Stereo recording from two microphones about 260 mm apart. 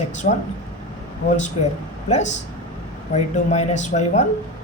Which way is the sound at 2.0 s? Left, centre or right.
Left.